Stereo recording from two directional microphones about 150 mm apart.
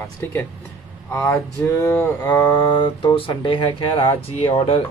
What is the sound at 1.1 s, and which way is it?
Speech, 20° left (ahead or behind).